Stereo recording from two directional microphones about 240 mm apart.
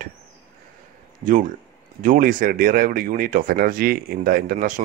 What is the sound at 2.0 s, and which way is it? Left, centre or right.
Speech, right.